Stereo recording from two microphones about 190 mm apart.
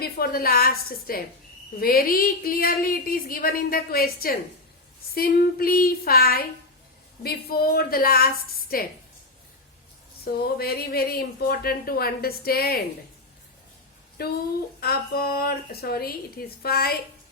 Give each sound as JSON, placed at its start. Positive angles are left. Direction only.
{"t": 0.0, "sound": "speech", "side_deg": 50}
{"t": 10.2, "sound": "speech", "side_deg": 55}
{"t": 14.2, "sound": "speech", "side_deg": 55}